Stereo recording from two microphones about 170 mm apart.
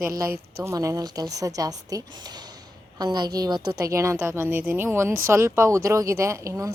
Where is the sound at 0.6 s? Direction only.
20° right (ahead or behind).